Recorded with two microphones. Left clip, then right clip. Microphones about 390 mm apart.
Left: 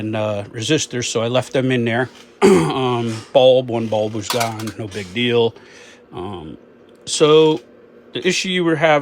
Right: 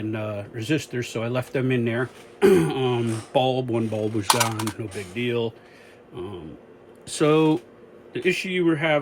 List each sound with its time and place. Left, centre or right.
0.0 s speech: centre
4.8 s speech: centre
7.0 s speech: centre